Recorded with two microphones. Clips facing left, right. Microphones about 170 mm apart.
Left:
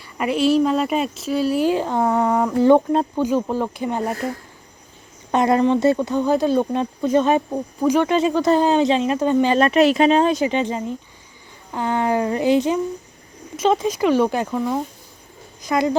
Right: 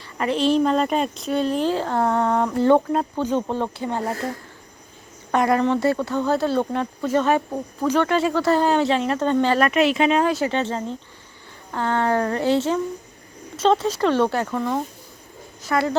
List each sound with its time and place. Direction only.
0.2 s speech: 10° left (ahead or behind)
5.3 s speech: 20° left (ahead or behind)
9.7 s speech: 40° left (ahead or behind); by 16.0 s 15° left (ahead or behind)